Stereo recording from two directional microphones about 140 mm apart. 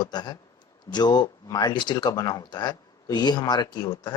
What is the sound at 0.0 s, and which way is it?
Speech, 30° left (ahead or behind).